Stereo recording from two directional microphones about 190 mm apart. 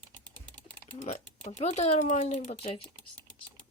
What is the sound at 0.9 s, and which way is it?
Speech, 35° left (ahead or behind).